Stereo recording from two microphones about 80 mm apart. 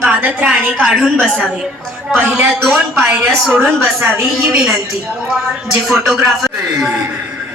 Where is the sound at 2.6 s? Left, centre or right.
Centre.